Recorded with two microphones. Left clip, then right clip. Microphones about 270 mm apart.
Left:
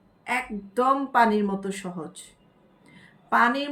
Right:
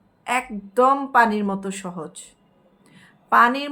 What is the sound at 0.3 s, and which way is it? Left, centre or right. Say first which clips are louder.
Speech: right 4 dB; centre.